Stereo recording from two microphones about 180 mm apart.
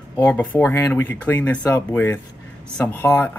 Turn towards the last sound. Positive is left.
turn(degrees=10)  # may be behind; listen again after turning